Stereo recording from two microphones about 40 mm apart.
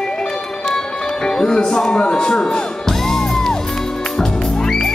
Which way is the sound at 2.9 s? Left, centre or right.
Centre.